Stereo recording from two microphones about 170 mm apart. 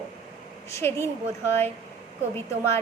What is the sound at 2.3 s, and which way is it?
Speech, 15° left (ahead or behind).